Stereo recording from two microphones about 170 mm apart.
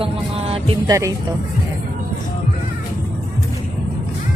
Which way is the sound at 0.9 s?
20° right (ahead or behind).